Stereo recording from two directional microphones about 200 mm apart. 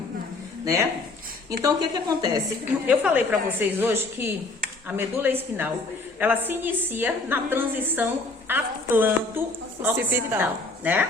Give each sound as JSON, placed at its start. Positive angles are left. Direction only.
{"t": 0.6, "sound": "a woman's voice", "side_deg": -15}
{"t": 2.8, "sound": "a woman's voice", "side_deg": -5}